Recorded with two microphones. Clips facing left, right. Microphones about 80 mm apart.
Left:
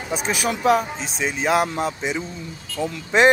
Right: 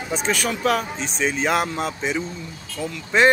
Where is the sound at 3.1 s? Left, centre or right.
Centre.